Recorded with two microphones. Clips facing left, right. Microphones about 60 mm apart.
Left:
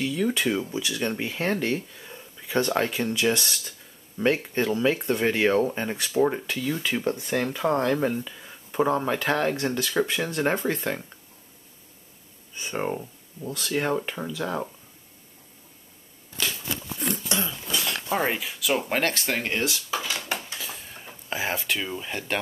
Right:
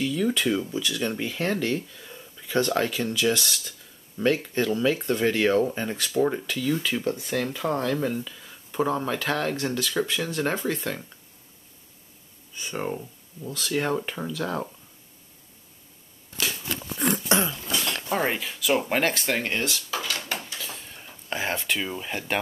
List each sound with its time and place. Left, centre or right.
0.0 s speech: centre
7.2 s speech: centre
12.5 s speech: left
12.8 s speech: centre
17.6 s speech: centre
20.5 s a sound: centre
21.3 s speech: centre